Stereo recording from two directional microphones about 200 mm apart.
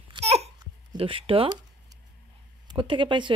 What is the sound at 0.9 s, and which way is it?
Speech, 25° right (ahead or behind).